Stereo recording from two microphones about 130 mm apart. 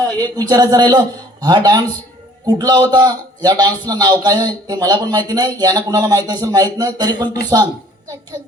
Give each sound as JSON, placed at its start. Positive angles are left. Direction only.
{"t": 0.2, "sound": "a man's voice", "side_deg": -30}